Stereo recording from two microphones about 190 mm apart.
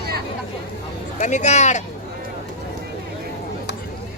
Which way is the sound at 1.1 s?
40° left (ahead or behind).